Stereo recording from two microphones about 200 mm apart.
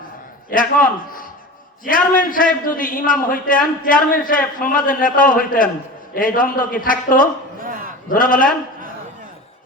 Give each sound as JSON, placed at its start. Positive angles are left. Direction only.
{"t": 0.5, "sound": "a man's voice", "side_deg": 45}
{"t": 7.6, "sound": "battle cry", "side_deg": -45}
{"t": 8.1, "sound": "a man's voice", "side_deg": 45}